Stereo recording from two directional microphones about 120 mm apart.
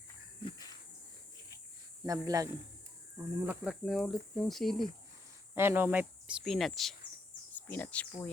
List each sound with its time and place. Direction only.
2.0 s a man's voice: 30° right (ahead or behind)
3.2 s speech: 15° right (ahead or behind); by 4.9 s centre (ahead or behind)
5.5 s speech: 20° right (ahead or behind)
6.4 s speech: centre (ahead or behind)
7.5 s speech: 15° left (ahead or behind)